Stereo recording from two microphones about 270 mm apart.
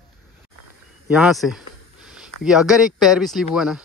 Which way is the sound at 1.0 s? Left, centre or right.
Centre.